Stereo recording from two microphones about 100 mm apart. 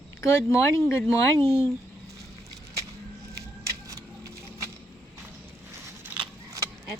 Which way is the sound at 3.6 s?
30° right (ahead or behind).